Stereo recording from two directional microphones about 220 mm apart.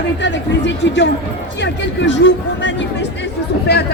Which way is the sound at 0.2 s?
55° left (ahead or behind).